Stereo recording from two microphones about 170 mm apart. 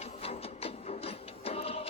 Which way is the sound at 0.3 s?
35° left (ahead or behind).